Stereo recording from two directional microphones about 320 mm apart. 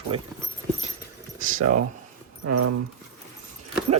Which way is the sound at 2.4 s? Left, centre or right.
Right.